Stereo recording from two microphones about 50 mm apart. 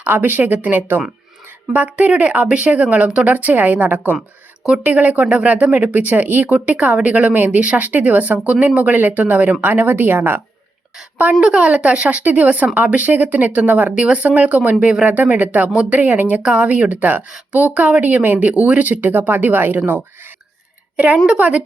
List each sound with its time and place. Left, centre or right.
0.0 s speech: right
7.3 s speech: right
11.2 s speech: right
13.9 s speech: centre
14.2 s speech: right
16.4 s speech: right
20.9 s a woman's voice: right